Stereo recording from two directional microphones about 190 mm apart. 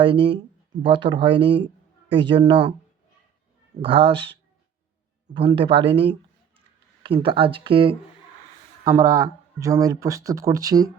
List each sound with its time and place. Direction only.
0.0 s speech: 25° right (ahead or behind)
3.8 s speech: 30° right (ahead or behind)